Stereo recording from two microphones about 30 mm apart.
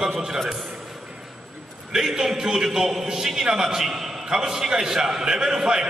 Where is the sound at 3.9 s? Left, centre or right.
Centre.